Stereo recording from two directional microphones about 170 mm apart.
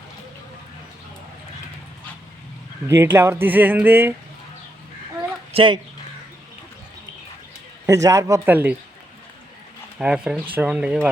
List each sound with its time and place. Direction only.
2.8 s speech: 15° right (ahead or behind)
5.5 s speech: 30° right (ahead or behind)
7.9 s speech: 20° right (ahead or behind)
10.0 s speech: 5° right (ahead or behind)